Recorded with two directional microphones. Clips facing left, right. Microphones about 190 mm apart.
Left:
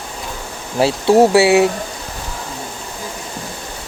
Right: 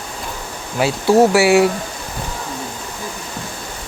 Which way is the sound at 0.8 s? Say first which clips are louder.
Left 1 dB; 30° left (ahead or behind).